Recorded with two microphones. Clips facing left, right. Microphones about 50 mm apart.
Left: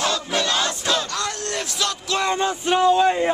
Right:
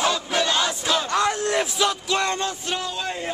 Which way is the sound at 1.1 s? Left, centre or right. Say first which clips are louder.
Right 5 dB; centre.